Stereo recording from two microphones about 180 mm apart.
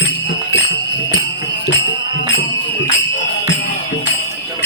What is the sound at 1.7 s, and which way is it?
Music, 85° left.